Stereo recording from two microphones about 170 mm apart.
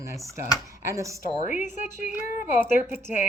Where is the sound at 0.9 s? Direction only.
20° right (ahead or behind).